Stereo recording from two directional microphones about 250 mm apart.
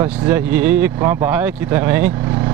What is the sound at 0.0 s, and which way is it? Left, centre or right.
Speech, centre.